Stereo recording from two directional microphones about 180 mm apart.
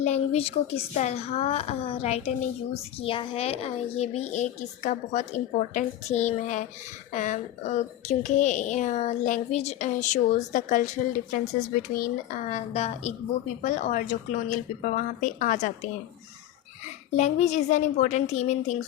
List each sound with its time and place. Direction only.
0.0 s speech: 35° left (ahead or behind)
17.2 s speech: 40° left (ahead or behind)